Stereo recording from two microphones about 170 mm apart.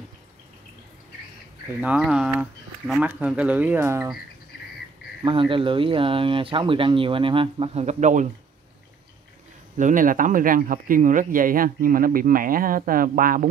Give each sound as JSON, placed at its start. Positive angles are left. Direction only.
{"t": 1.8, "sound": "speech", "side_deg": -5}
{"t": 5.2, "sound": "speech", "side_deg": -30}
{"t": 9.8, "sound": "speech", "side_deg": -50}